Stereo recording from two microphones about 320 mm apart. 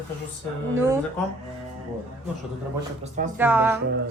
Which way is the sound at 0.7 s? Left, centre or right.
Centre.